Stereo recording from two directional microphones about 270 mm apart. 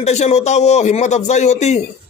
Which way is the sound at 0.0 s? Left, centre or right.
Left.